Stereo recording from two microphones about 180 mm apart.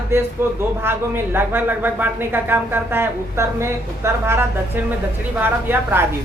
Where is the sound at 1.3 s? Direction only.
10° right (ahead or behind).